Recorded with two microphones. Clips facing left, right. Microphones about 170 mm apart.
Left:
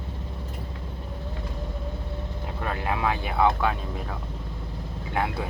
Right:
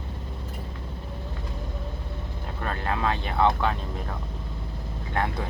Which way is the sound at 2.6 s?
10° left (ahead or behind).